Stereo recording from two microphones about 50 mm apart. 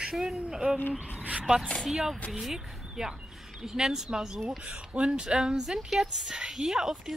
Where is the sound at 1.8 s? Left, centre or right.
Centre.